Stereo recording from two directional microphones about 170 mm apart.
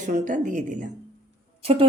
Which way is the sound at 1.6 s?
35° right (ahead or behind).